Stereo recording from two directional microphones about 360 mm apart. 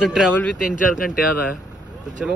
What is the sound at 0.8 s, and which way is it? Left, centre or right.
Speech, left.